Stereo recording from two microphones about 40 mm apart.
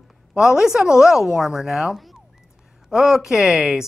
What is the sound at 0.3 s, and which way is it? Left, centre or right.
A woman's voice, centre.